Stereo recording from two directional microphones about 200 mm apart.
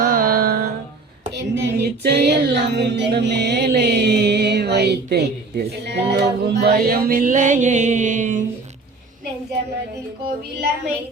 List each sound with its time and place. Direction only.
0.0 s carnatic music: 45° right (ahead or behind)
1.4 s music: 55° right (ahead or behind); by 8.4 s 40° right (ahead or behind)